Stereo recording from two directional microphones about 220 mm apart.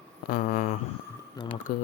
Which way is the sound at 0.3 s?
45° left (ahead or behind).